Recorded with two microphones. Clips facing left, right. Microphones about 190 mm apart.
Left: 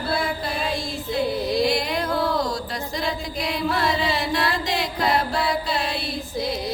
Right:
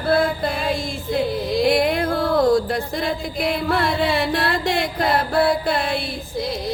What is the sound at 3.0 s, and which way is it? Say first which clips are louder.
Chant: right 3 dB; 55° right (ahead or behind).